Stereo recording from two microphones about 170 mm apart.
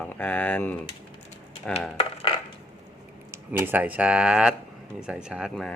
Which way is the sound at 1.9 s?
35° left (ahead or behind).